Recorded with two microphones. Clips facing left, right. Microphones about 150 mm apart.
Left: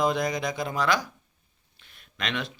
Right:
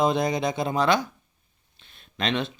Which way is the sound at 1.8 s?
25° right (ahead or behind).